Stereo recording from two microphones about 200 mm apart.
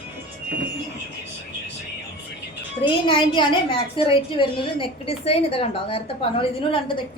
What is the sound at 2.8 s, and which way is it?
A woman's voice, 25° left (ahead or behind).